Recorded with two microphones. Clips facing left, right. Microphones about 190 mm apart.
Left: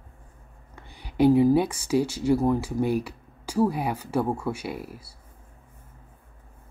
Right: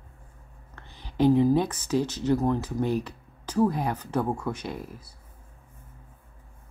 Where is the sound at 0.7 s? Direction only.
10° left (ahead or behind).